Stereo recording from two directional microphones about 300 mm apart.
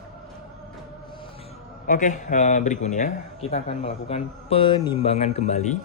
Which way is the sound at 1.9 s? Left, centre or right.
Left.